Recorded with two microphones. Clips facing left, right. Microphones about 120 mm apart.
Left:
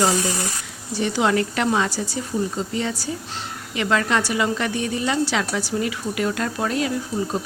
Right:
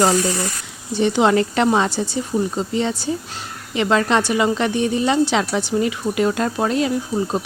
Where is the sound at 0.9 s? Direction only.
25° right (ahead or behind).